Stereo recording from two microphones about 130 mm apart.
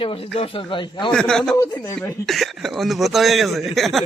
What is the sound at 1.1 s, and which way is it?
A man's voice, 5° left (ahead or behind).